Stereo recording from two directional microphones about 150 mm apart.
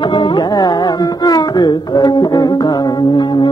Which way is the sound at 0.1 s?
30° left (ahead or behind).